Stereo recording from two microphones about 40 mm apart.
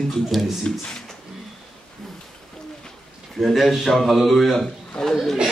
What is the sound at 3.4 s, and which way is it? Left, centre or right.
A man's voice, centre.